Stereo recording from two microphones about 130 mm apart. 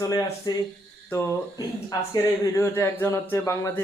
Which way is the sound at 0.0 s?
30° left (ahead or behind).